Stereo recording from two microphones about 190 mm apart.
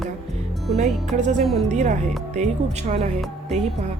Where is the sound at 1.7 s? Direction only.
40° right (ahead or behind).